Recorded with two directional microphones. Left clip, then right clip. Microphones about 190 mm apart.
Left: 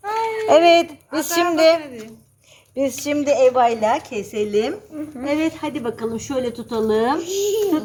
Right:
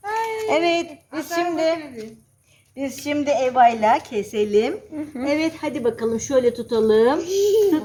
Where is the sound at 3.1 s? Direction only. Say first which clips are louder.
Left 2 dB; 35° left (ahead or behind); by 7.8 s 10° left (ahead or behind).